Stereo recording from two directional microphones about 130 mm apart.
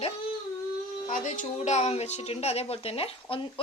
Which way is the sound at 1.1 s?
65° left (ahead or behind).